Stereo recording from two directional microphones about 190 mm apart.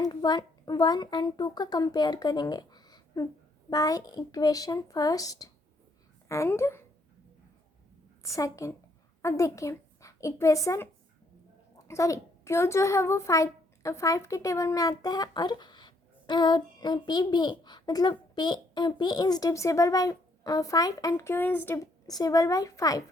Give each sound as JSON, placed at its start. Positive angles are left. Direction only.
{"t": 0.0, "sound": "a woman's voice", "side_deg": 20}
{"t": 8.2, "sound": "a woman's voice", "side_deg": 15}
{"t": 11.9, "sound": "a child's voice", "side_deg": 15}